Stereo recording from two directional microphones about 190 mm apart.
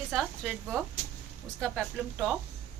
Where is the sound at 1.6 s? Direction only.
Centre (ahead or behind).